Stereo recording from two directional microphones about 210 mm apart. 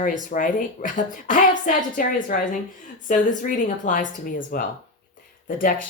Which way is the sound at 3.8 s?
40° left (ahead or behind).